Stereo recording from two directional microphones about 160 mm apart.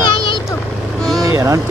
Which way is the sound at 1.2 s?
20° right (ahead or behind).